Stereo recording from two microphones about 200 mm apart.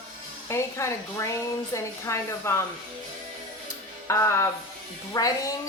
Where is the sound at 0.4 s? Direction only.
15° left (ahead or behind).